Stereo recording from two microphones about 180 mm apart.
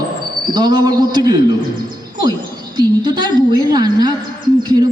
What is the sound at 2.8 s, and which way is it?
A woman's voice, 25° right (ahead or behind).